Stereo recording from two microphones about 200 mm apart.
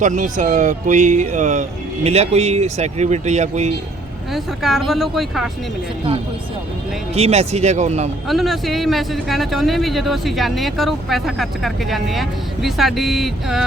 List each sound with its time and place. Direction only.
0.0 s speech: 40° right (ahead or behind)
4.4 s speech: centre (ahead or behind)
7.1 s speech: 30° right (ahead or behind)
8.3 s speech: centre (ahead or behind)